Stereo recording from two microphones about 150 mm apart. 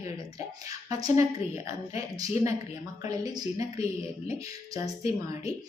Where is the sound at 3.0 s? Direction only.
25° right (ahead or behind).